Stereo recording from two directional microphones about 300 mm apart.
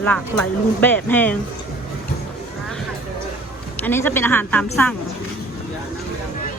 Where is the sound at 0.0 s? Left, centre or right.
Centre.